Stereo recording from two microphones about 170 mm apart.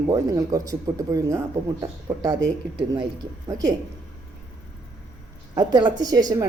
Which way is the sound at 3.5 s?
20° right (ahead or behind).